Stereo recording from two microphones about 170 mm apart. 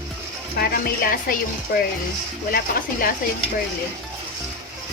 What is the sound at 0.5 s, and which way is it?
Speech, 60° left (ahead or behind).